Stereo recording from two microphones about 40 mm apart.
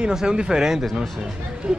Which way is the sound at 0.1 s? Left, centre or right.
Centre.